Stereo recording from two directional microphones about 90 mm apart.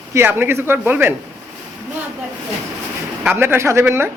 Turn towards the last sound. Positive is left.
turn(degrees=-25)  # may be behind; listen again after turning